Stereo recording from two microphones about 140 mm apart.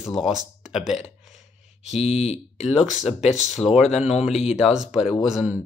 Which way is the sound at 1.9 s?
50° left (ahead or behind).